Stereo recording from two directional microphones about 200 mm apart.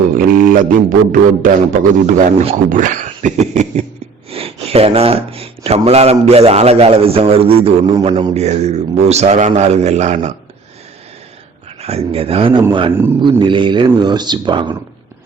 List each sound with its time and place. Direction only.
0.2 s a sound: 45° right (ahead or behind)
2.0 s speech: 35° right (ahead or behind)
11.8 s speech: 30° right (ahead or behind)